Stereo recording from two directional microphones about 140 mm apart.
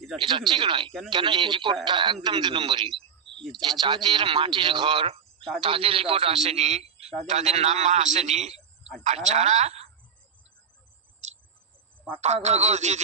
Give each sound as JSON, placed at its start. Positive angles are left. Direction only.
{"t": 0.3, "sound": "speech", "side_deg": -35}
{"t": 3.4, "sound": "speech", "side_deg": 0}
{"t": 3.8, "sound": "a man's voice", "side_deg": -35}
{"t": 8.5, "sound": "a sound", "side_deg": -5}
{"t": 9.0, "sound": "a man's voice", "side_deg": -55}
{"t": 11.2, "sound": "cricket", "side_deg": -55}
{"t": 12.2, "sound": "a man's voice", "side_deg": -55}